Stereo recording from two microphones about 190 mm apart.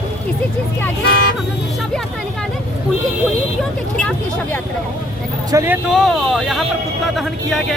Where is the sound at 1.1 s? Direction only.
60° left (ahead or behind).